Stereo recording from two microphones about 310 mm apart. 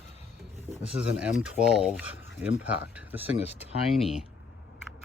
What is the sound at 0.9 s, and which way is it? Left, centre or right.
Speech, centre.